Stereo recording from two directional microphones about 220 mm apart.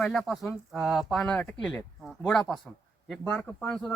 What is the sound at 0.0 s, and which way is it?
Speech, centre (ahead or behind).